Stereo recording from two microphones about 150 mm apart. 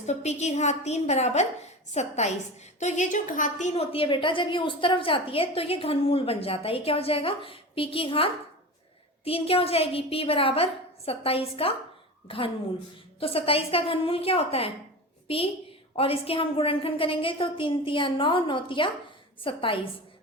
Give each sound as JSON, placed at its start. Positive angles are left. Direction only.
{"t": 0.0, "sound": "a woman's voice", "side_deg": 50}